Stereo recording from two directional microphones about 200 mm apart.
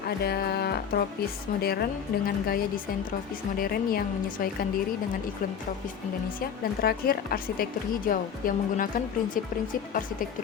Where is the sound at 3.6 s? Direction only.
45° left (ahead or behind).